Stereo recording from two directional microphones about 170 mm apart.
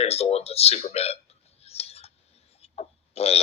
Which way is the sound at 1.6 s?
35° left (ahead or behind).